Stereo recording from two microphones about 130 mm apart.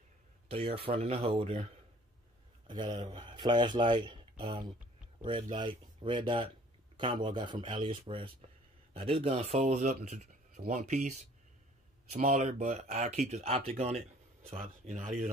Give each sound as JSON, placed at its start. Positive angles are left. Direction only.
{"t": 0.5, "sound": "speech", "side_deg": -50}
{"t": 2.7, "sound": "speech", "side_deg": -35}